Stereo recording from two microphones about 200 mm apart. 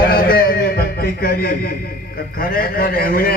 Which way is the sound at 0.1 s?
50° left (ahead or behind).